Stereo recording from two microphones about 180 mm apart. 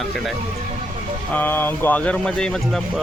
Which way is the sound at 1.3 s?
10° left (ahead or behind).